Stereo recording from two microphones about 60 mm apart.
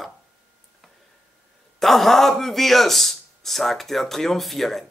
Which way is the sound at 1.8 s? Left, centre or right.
Centre.